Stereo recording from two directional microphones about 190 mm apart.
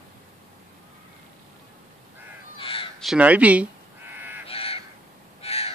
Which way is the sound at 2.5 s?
30° left (ahead or behind).